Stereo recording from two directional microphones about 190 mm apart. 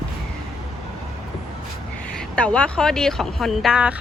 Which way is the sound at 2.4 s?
5° left (ahead or behind).